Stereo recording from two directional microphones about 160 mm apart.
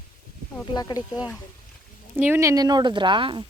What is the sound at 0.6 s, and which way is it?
Speech, 25° left (ahead or behind).